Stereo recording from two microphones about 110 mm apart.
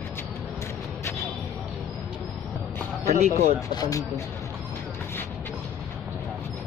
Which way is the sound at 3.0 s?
90° right.